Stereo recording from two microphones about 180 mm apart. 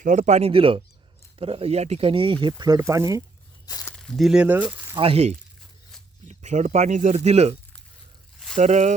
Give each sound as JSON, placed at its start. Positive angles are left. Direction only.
{"t": 0.0, "sound": "speech", "side_deg": -40}
{"t": 3.7, "sound": "speech", "side_deg": 20}
{"t": 3.9, "sound": "speech", "side_deg": 5}
{"t": 4.9, "sound": "speech", "side_deg": -35}
{"t": 8.5, "sound": "speech", "side_deg": -40}